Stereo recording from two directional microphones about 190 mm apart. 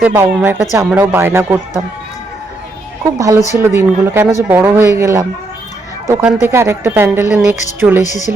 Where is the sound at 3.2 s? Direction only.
15° right (ahead or behind).